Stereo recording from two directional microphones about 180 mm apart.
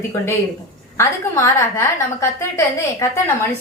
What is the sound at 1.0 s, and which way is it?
A woman's voice, 15° left (ahead or behind).